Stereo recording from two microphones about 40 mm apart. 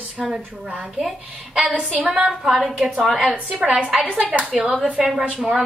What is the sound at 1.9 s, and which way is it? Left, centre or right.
Speech, right.